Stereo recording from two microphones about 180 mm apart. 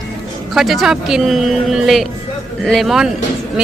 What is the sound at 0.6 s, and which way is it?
Speech, centre (ahead or behind).